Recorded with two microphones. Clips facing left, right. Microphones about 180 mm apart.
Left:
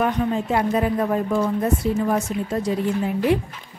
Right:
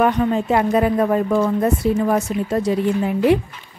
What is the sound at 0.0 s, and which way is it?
Speech, 75° right (ahead or behind).